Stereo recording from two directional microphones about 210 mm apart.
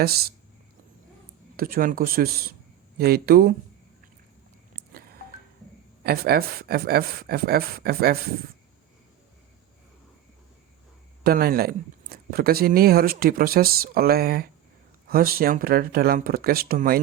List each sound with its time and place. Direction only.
0.0 s speech: 45° right (ahead or behind)
1.5 s speech: 45° right (ahead or behind)
6.0 s speech: 50° right (ahead or behind)
11.2 s speech: 45° right (ahead or behind)